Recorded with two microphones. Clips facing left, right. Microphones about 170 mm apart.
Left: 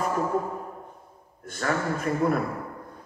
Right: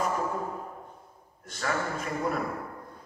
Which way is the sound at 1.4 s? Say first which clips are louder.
Left 3 dB; 55° left (ahead or behind).